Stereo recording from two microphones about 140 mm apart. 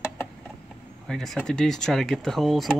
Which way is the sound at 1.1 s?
Centre (ahead or behind).